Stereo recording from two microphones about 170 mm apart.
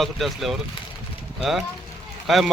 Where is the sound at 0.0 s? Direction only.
Centre (ahead or behind).